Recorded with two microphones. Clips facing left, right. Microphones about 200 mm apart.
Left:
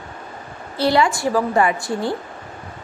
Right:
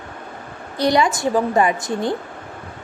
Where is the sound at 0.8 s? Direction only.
15° right (ahead or behind).